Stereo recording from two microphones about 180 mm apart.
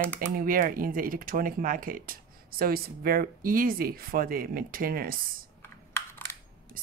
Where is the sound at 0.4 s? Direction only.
50° right (ahead or behind).